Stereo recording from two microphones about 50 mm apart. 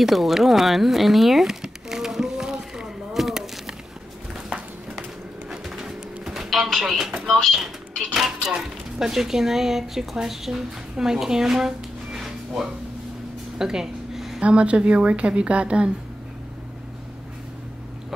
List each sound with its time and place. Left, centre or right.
0.0 s a sound: centre
5.5 s pigeon: centre
6.9 s speech: centre
7.2 s speech: centre
7.5 s speech: centre
13.6 s a sound: centre
14.4 s a woman's voice: right